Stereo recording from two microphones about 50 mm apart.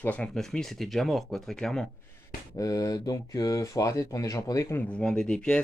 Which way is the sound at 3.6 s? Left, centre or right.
Left.